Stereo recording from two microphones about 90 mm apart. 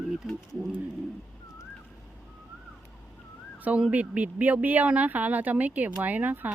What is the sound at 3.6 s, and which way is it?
Speech, 15° right (ahead or behind).